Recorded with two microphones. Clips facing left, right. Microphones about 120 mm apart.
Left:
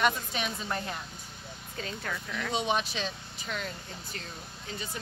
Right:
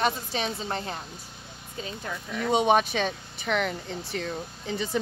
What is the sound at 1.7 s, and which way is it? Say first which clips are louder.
Speech: right 2 dB; 20° right (ahead or behind).